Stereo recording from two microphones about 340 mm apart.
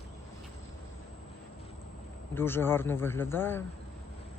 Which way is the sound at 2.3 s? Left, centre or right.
Centre.